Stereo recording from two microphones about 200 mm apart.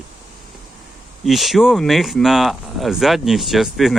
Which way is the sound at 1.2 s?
Centre (ahead or behind).